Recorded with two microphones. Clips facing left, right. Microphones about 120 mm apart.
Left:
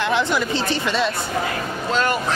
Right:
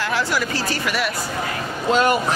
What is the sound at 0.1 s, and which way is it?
Speech, 20° left (ahead or behind).